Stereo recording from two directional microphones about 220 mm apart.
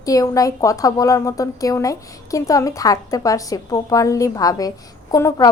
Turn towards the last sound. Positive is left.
turn(degrees=15)  # may be behind; listen again after turning